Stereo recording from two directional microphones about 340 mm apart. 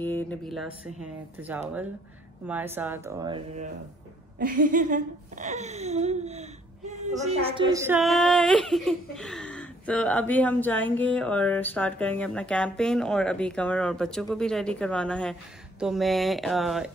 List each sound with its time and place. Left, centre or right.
0.0 s speech: centre
4.4 s speech: right; by 16.9 s centre